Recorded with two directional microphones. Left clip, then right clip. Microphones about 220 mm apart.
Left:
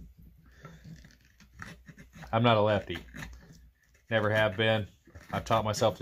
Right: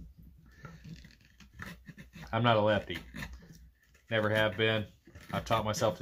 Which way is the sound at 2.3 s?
40° left (ahead or behind).